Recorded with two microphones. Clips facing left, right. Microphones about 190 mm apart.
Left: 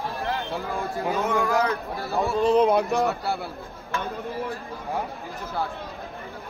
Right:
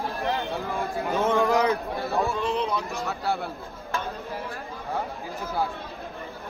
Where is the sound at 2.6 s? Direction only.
60° left (ahead or behind).